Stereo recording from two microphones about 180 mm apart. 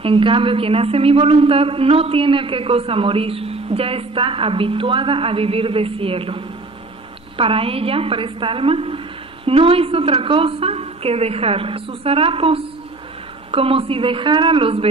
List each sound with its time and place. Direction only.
0.0 s a woman's voice: 30° right (ahead or behind)